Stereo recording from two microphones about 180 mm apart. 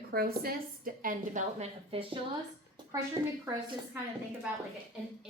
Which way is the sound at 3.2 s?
20° right (ahead or behind).